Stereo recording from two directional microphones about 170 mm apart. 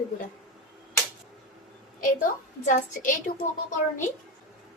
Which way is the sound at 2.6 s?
50° left (ahead or behind).